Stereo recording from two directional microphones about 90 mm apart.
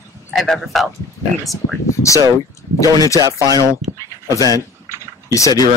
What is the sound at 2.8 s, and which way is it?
Speech, 40° left (ahead or behind).